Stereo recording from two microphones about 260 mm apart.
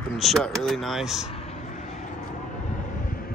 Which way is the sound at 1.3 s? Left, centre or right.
Left.